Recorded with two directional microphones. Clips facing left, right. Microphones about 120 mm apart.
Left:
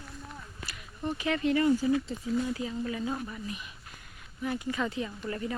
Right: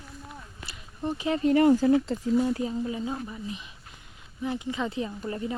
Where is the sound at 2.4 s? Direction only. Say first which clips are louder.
Right 5 dB; 35° right (ahead or behind).